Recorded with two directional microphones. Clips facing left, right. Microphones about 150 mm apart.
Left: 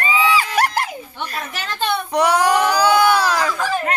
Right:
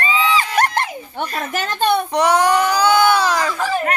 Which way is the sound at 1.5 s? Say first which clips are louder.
Right 6 dB; 45° right (ahead or behind).